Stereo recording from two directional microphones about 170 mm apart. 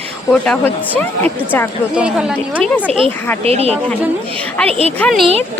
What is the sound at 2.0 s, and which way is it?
Speech, 5° right (ahead or behind).